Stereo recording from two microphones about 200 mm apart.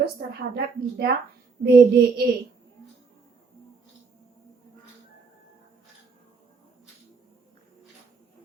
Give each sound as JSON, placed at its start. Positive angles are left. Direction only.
{"t": 0.0, "sound": "a woman's voice", "side_deg": -50}